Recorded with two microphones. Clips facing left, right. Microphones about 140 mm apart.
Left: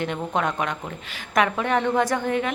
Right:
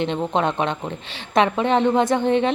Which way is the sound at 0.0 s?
25° right (ahead or behind).